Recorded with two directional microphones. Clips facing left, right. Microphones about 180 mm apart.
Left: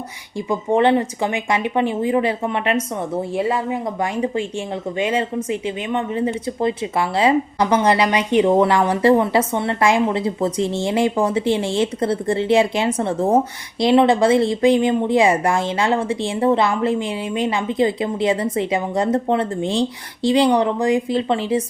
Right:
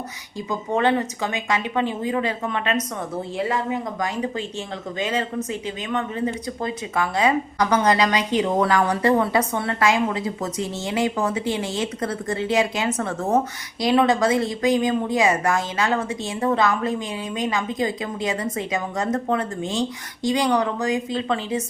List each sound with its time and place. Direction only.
0.7 s speech: 30° left (ahead or behind)
1.2 s speech: 15° left (ahead or behind)
2.0 s speech: 25° left (ahead or behind)